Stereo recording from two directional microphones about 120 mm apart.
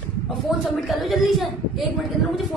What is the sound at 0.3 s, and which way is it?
A woman's voice, centre (ahead or behind).